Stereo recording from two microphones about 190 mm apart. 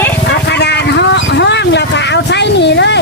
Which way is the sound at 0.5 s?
65° left (ahead or behind).